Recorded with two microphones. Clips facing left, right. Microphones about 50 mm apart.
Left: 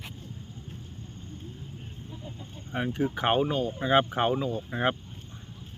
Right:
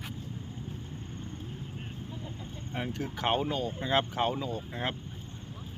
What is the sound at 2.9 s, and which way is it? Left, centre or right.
Speech, centre.